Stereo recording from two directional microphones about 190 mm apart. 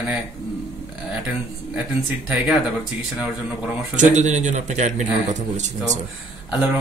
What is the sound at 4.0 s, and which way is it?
A man's voice, 40° right (ahead or behind).